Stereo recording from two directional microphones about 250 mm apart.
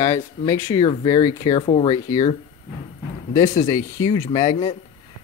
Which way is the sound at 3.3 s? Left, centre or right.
Left.